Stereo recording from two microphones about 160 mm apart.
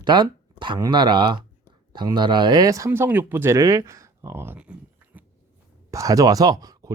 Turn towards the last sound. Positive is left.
turn(degrees=-25)  # may be behind; listen again after turning